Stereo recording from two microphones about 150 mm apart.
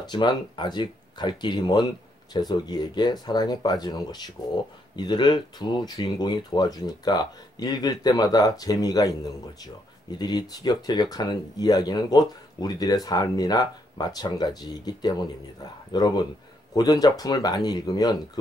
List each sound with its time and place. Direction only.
0.0 s speech: 30° left (ahead or behind)